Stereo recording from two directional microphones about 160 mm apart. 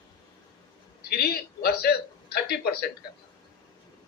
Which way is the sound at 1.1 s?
75° left (ahead or behind).